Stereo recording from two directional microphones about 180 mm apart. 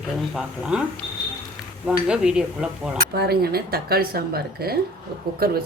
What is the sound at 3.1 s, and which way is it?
Speech, 60° right (ahead or behind).